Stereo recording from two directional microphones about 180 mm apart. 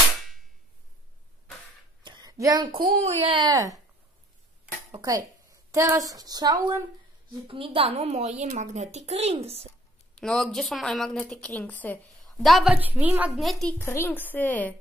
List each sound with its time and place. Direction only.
2.0 s a sound: 20° right (ahead or behind)
3.1 s speech: 35° right (ahead or behind)
5.0 s a woman's voice: 20° right (ahead or behind); by 9.7 s 35° right (ahead or behind)
10.1 s a woman's voice: 5° left (ahead or behind)
12.4 s a woman's voice: centre (ahead or behind)
13.7 s a woman's voice: 15° left (ahead or behind)